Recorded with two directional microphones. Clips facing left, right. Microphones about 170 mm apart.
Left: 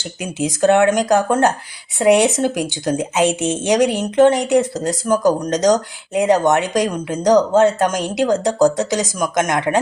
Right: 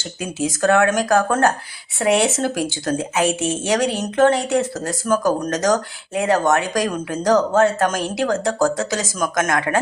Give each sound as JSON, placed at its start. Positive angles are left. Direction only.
{"t": 0.2, "sound": "speech", "side_deg": 20}